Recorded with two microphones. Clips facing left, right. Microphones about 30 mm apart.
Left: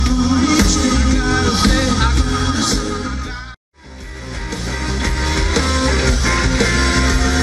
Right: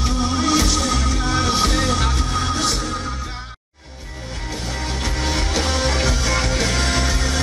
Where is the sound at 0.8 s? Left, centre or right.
Left.